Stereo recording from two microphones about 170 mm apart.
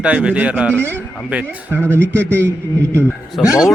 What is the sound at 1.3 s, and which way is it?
Speech, 10° right (ahead or behind).